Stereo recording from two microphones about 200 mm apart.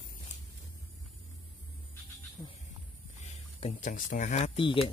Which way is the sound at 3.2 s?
35° left (ahead or behind).